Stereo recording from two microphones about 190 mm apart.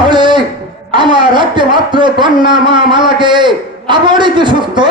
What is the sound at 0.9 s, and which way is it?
Speech, 25° right (ahead or behind).